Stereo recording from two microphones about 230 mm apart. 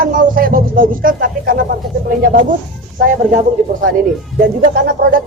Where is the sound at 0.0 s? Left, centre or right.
Right.